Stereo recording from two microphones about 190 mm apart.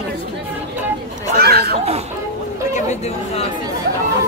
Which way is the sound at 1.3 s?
55° right (ahead or behind).